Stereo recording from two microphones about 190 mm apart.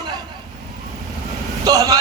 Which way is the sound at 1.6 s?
20° right (ahead or behind).